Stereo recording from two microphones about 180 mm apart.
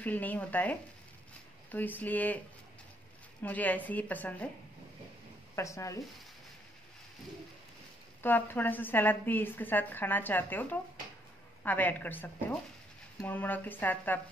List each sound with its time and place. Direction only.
0.0 s a woman's voice: 10° left (ahead or behind)
3.4 s a woman's voice: 10° left (ahead or behind)
5.6 s a woman's voice: 15° left (ahead or behind)
8.2 s a woman's voice: 10° left (ahead or behind)